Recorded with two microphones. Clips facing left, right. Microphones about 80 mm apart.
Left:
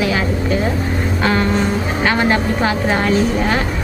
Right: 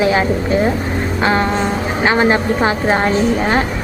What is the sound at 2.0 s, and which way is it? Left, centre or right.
A woman's voice, right.